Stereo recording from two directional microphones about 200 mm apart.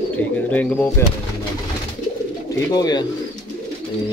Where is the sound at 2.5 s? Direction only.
20° left (ahead or behind).